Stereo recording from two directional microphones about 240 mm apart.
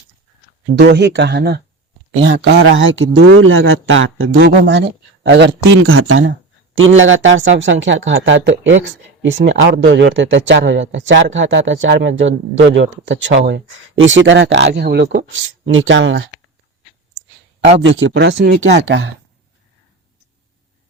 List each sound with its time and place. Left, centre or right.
0.8 s speech: right
17.8 s speech: right